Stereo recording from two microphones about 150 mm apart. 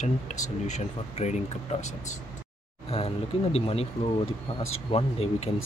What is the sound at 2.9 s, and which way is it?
Speech, 40° left (ahead or behind).